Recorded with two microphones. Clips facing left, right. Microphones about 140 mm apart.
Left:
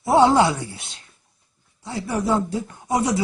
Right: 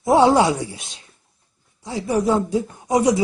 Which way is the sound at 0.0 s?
15° right (ahead or behind).